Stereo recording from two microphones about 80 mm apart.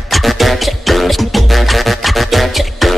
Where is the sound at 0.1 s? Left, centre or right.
Centre.